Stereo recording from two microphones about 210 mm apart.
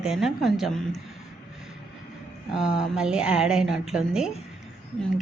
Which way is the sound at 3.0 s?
5° right (ahead or behind).